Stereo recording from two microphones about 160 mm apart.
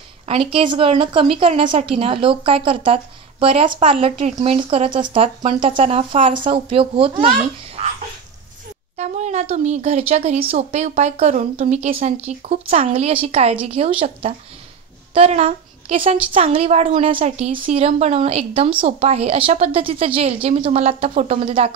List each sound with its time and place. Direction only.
0.3 s a woman's voice: 35° right (ahead or behind)
8.9 s a woman's voice: 45° right (ahead or behind)